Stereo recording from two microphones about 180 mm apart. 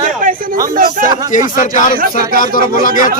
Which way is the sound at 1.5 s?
50° left (ahead or behind).